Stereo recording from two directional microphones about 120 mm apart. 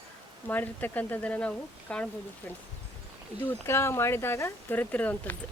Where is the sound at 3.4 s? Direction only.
20° left (ahead or behind).